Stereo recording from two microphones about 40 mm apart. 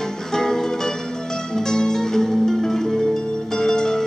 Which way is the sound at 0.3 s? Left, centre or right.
Centre.